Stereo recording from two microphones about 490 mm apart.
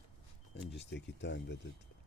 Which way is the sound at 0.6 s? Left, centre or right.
Left.